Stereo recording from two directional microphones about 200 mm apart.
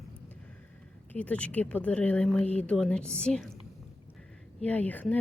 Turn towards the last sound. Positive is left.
turn(degrees=10)  # may be behind; listen again after turning